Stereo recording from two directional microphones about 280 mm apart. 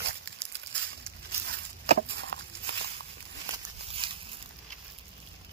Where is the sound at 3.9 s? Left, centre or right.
Centre.